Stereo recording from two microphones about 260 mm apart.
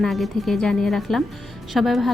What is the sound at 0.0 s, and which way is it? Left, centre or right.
A woman's voice, centre.